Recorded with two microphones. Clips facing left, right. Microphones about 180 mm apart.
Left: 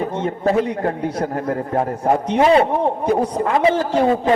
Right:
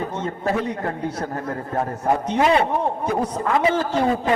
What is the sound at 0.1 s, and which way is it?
A man's voice, 30° left (ahead or behind).